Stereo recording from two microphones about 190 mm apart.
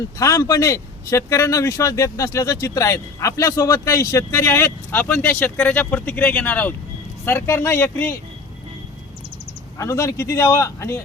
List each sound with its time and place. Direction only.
0.2 s speech: 15° left (ahead or behind)
9.7 s speech: 15° left (ahead or behind)